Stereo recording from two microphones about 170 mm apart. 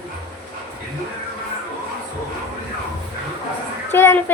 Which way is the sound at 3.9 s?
15° left (ahead or behind).